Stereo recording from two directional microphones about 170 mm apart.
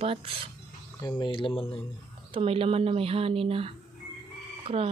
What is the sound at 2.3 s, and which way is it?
Speech, 35° right (ahead or behind).